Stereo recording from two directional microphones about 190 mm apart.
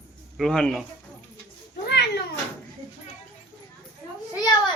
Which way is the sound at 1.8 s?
60° left (ahead or behind).